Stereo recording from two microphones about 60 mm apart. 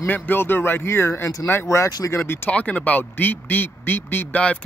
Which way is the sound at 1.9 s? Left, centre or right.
Left.